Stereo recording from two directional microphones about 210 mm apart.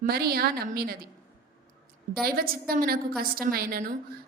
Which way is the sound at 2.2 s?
45° right (ahead or behind).